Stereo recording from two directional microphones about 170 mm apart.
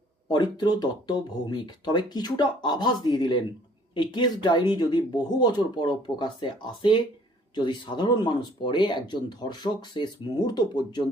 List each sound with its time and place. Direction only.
0.3 s speech: 25° left (ahead or behind)